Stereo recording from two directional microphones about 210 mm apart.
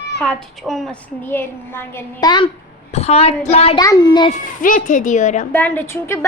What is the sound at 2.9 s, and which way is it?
Child singing, 30° left (ahead or behind).